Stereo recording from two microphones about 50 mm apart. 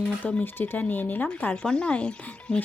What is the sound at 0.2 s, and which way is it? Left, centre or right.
Speech, left.